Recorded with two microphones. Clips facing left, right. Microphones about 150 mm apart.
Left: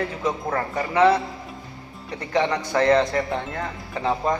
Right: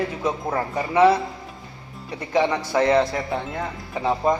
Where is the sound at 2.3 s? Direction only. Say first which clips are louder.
Right 1 dB; 10° right (ahead or behind).